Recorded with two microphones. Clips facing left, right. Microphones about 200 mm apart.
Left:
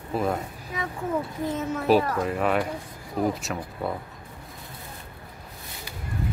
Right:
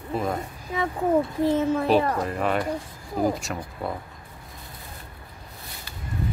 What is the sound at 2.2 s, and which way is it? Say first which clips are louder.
Speech: left 1 dB; centre (ahead or behind).